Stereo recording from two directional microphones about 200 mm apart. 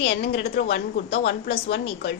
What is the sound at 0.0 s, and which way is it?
Speech, 55° left (ahead or behind).